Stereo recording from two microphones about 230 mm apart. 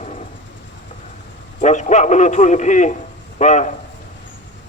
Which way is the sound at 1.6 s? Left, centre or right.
Left.